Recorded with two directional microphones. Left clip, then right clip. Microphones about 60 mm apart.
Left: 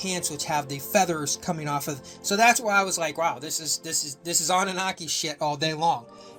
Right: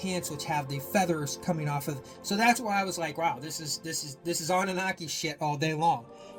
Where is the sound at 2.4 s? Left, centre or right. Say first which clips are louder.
Left 6 dB; left.